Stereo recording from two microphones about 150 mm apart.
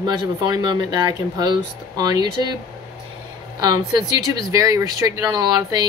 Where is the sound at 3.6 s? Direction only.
25° right (ahead or behind).